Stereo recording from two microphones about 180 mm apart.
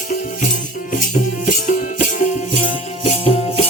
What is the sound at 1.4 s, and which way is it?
Music, 45° left (ahead or behind).